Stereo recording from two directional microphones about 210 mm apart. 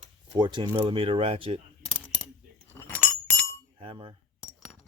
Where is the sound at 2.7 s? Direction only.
10° left (ahead or behind).